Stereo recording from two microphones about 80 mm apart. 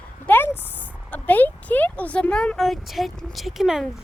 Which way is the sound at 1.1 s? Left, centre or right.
Left.